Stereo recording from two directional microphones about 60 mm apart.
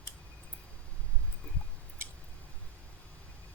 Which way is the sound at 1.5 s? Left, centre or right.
Centre.